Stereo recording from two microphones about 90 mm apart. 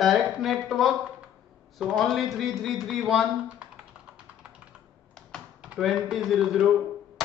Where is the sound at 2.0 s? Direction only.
Centre (ahead or behind).